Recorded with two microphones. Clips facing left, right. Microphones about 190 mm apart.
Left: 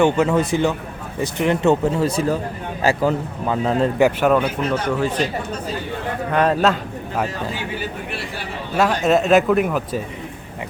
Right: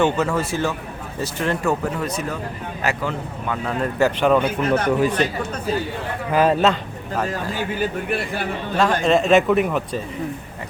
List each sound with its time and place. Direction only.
0.0 s a man's voice: 15° left (ahead or behind)
3.9 s speech: 15° left (ahead or behind)
4.9 s speech: 15° right (ahead or behind)
6.3 s speech: 5° right (ahead or behind)
7.5 s speech: 50° right (ahead or behind)
8.7 s speech: 5° left (ahead or behind)